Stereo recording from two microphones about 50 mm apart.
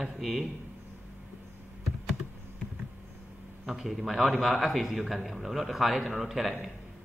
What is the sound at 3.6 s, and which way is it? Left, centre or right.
A man's voice, centre.